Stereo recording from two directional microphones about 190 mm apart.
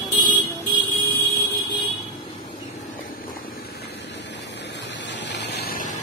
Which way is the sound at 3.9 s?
65° left (ahead or behind).